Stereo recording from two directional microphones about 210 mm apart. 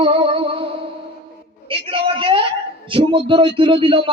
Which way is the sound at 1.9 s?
25° right (ahead or behind).